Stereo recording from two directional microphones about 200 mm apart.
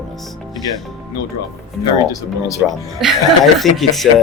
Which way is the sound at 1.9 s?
15° left (ahead or behind).